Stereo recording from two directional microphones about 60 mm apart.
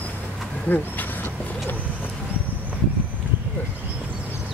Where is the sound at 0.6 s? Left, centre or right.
Left.